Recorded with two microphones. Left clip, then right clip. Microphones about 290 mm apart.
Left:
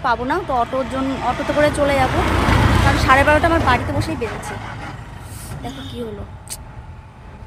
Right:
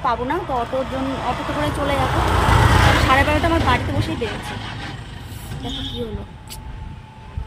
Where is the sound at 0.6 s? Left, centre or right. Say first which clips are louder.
Left 2 dB; centre.